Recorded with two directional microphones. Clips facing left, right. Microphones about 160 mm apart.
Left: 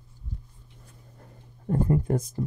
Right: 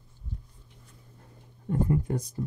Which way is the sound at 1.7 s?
45° left (ahead or behind).